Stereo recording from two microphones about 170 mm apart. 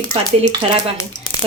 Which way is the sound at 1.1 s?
50° left (ahead or behind).